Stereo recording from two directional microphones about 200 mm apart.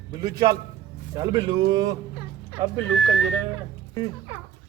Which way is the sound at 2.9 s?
5° right (ahead or behind).